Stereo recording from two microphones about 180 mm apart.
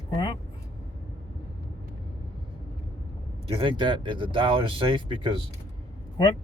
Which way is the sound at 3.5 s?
30° right (ahead or behind).